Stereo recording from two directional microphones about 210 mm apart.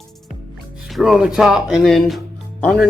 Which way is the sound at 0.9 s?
Centre (ahead or behind).